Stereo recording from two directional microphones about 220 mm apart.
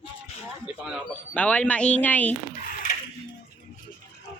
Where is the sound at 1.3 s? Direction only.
5° left (ahead or behind).